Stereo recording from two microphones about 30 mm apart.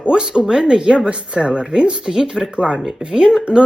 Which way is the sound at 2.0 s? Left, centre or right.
Centre.